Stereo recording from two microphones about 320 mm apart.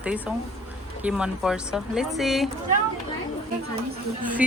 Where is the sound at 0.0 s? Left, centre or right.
Centre.